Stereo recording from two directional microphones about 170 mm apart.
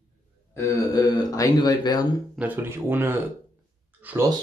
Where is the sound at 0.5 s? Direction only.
20° left (ahead or behind).